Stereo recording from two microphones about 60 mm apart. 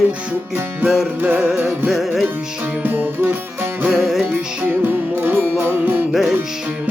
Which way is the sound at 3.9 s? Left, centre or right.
Centre.